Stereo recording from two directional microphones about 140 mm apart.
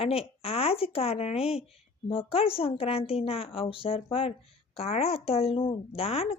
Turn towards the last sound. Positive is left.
turn(degrees=45)  # may be behind; listen again after turning